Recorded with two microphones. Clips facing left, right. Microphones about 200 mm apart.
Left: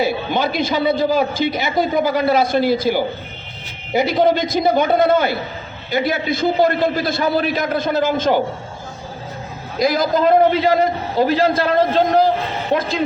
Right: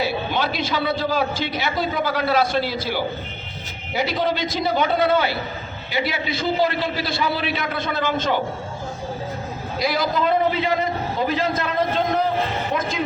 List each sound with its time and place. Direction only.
0.0 s a sound: 50° left (ahead or behind)
1.1 s a man's voice: 50° left (ahead or behind)
3.9 s a man's voice: 50° left (ahead or behind)
9.7 s a man's voice: 45° left (ahead or behind)
11.2 s a man's voice: 75° left (ahead or behind)
11.4 s a man's voice: 35° left (ahead or behind)